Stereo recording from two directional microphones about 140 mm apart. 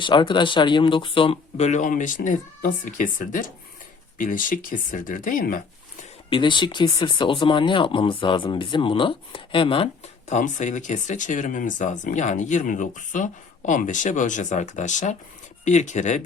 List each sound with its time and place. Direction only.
0.0 s speech: 35° left (ahead or behind); by 6.1 s 70° left (ahead or behind)
6.3 s speech: 35° left (ahead or behind)
10.2 s speech: 60° left (ahead or behind)